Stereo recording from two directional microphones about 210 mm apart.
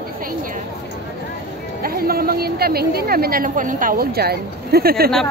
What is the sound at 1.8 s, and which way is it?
A woman's voice, 45° right (ahead or behind).